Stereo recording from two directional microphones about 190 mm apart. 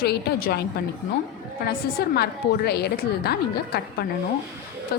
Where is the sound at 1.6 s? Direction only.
55° left (ahead or behind).